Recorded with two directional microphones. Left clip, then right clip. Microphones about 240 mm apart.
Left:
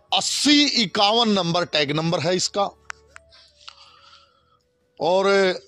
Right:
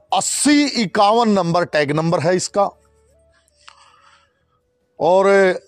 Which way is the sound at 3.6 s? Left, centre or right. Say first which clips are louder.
Even; right.